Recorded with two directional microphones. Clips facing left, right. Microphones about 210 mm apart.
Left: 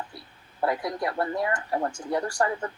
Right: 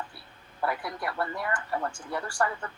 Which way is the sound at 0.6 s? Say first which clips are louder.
Left 5 dB; 40° left (ahead or behind).